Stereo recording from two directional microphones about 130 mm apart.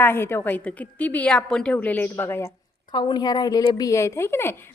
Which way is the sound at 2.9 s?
35° left (ahead or behind).